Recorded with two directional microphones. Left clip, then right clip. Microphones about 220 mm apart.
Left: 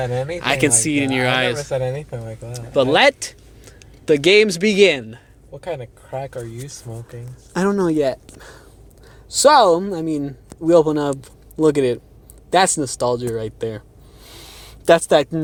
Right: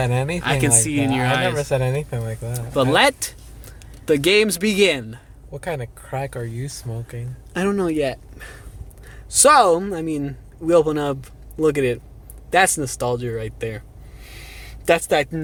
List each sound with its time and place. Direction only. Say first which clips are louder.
0.0 s speech: even; 35° right (ahead or behind)
0.3 s speech: left 4 dB; 25° left (ahead or behind)
2.0 s speech: right 3 dB; 10° right (ahead or behind)
2.5 s speech: left 3 dB; centre (ahead or behind)
7.5 s speech: left 3 dB; 20° left (ahead or behind)
14.3 s a sound: even; 20° left (ahead or behind)